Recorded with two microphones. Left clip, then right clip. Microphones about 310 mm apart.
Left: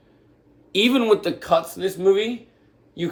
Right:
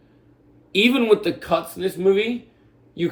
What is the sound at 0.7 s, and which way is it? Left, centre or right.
Speech, centre.